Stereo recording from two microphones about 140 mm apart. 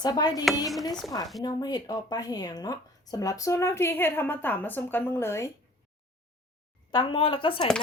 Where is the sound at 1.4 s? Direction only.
25° left (ahead or behind).